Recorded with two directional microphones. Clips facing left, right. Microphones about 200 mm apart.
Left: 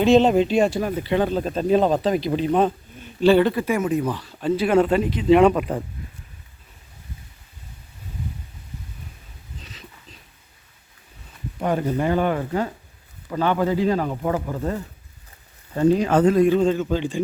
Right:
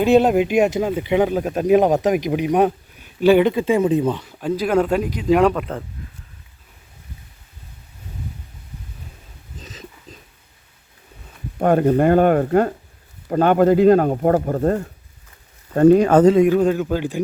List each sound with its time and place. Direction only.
0.1 s speech: 10° right (ahead or behind)
4.4 s speech: centre (ahead or behind)
9.6 s wheeze: 45° right (ahead or behind)
11.6 s speech: 55° right (ahead or behind)
16.3 s speech: 15° right (ahead or behind)
16.6 s speech: 5° right (ahead or behind)